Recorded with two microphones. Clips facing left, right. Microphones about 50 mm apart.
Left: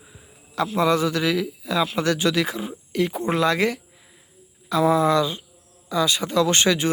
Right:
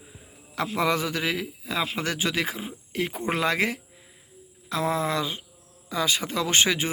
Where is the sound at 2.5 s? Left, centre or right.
Centre.